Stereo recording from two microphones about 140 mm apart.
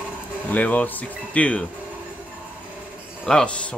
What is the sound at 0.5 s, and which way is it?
Speech, 10° left (ahead or behind).